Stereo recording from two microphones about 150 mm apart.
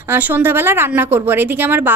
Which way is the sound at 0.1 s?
15° right (ahead or behind).